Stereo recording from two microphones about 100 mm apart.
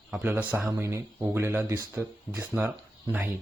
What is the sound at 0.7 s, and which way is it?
Speech, 30° right (ahead or behind).